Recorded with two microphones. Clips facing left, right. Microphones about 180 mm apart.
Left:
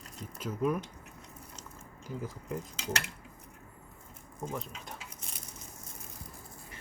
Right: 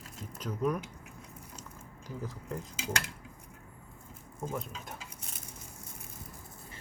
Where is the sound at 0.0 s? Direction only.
Centre (ahead or behind).